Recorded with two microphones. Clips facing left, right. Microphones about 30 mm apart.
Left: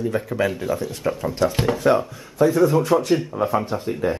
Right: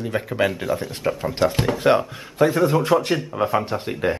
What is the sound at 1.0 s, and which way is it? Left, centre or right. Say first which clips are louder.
Speech: right 1 dB; centre.